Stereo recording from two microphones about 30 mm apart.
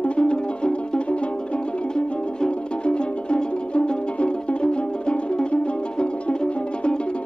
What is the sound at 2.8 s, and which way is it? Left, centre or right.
Music, left.